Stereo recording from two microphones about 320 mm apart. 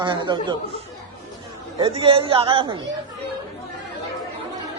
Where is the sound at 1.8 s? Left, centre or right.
Centre.